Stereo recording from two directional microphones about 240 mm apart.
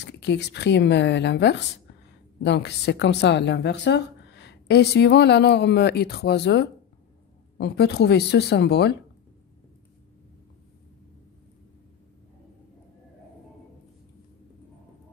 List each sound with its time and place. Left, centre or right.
0.0 s a woman's voice: left